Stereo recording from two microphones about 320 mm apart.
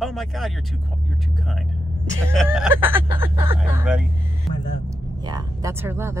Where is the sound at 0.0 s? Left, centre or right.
Centre.